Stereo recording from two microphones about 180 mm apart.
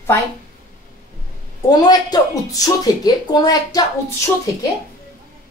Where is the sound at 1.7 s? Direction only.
20° left (ahead or behind).